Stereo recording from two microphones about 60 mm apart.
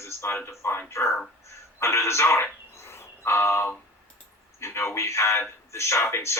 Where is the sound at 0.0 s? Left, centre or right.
Left.